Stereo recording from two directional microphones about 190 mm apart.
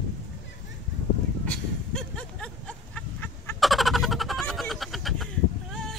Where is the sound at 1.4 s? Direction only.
5° left (ahead or behind).